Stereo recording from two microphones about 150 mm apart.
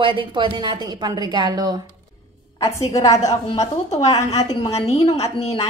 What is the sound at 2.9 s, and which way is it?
Speech, 25° left (ahead or behind).